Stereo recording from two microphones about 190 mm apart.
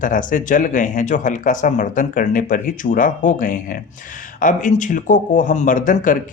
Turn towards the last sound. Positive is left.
turn(degrees=45)  # may be behind; listen again after turning